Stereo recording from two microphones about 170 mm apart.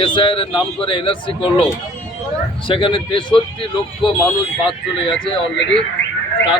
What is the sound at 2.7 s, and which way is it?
Speech, 30° left (ahead or behind).